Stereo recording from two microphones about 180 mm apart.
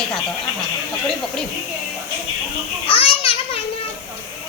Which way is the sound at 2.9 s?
30° left (ahead or behind).